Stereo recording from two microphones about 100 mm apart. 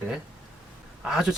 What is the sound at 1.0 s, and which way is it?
Speech, 5° right (ahead or behind).